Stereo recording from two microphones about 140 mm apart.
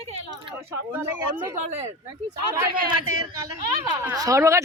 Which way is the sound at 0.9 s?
15° right (ahead or behind).